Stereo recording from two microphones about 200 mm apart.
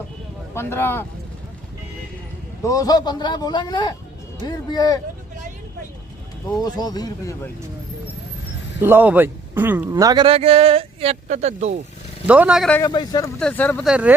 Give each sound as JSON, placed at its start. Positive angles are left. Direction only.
{"t": 0.5, "sound": "speech", "side_deg": 10}
{"t": 2.6, "sound": "a man's voice", "side_deg": 15}
{"t": 6.5, "sound": "a man's voice", "side_deg": 20}
{"t": 8.8, "sound": "a man's voice", "side_deg": -10}
{"t": 12.3, "sound": "a man's voice", "side_deg": -5}
{"t": 12.8, "sound": "a man's voice", "side_deg": 20}
{"t": 13.4, "sound": "speech", "side_deg": 10}
{"t": 13.8, "sound": "a man's voice", "side_deg": -5}